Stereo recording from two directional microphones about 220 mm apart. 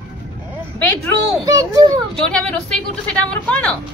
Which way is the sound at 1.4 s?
15° right (ahead or behind).